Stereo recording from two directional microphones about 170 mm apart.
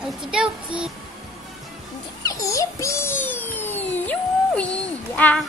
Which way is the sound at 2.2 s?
20° left (ahead or behind).